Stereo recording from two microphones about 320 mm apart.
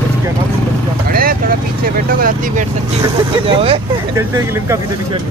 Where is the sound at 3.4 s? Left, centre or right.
Centre.